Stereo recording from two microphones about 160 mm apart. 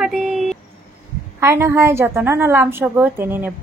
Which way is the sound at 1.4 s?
15° right (ahead or behind).